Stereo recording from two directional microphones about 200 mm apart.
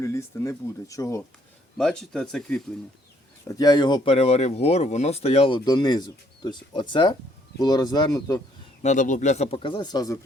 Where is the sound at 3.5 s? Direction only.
20° left (ahead or behind).